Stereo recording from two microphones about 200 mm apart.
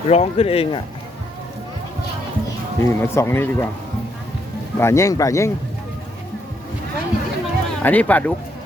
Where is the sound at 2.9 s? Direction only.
10° left (ahead or behind).